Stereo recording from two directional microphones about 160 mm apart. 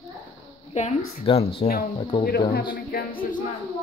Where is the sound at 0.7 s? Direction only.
40° left (ahead or behind).